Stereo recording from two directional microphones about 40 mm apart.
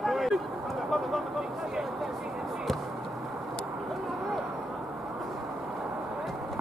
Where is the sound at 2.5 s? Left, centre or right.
Centre.